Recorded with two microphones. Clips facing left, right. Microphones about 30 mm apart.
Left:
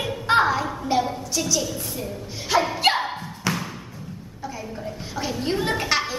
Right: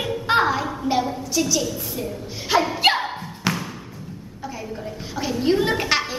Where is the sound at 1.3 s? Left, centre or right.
Centre.